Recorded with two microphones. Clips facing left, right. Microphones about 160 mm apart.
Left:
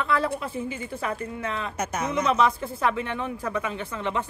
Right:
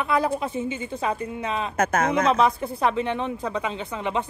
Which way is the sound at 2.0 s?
55° right (ahead or behind).